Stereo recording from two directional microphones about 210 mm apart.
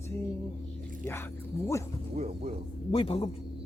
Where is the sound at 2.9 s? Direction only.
25° left (ahead or behind).